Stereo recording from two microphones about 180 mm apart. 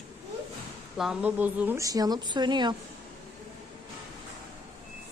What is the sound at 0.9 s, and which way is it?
A woman's voice, 5° right (ahead or behind).